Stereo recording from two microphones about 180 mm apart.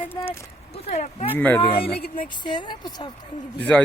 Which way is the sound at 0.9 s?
40° left (ahead or behind).